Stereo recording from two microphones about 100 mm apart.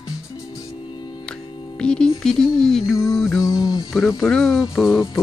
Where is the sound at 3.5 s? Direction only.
40° left (ahead or behind).